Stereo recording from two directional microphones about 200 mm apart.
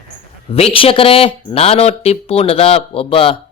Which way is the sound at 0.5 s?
30° left (ahead or behind).